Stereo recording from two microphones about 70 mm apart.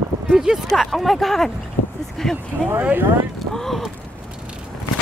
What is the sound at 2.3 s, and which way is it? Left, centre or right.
Speech, right.